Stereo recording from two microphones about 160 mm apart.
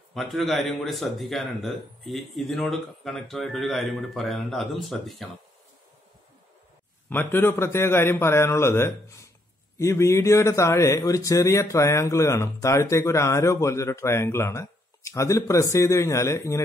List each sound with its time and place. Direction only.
0.1 s speech: centre (ahead or behind)
7.1 s a man's voice: 10° left (ahead or behind)